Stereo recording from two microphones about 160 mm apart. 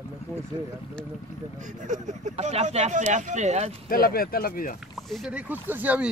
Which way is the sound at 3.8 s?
65° left (ahead or behind).